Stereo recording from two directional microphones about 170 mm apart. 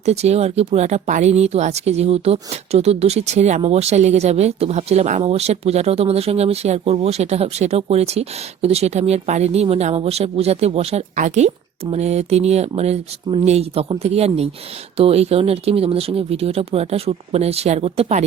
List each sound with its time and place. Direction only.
0.0 s speech: 40° right (ahead or behind)